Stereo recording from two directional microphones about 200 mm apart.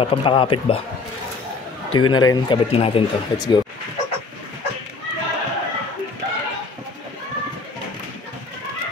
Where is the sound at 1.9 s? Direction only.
20° left (ahead or behind).